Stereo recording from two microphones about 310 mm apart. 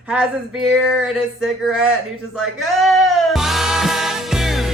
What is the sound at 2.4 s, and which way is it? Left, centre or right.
Music, centre.